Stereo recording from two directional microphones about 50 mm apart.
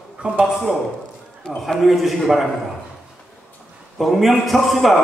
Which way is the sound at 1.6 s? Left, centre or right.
Centre.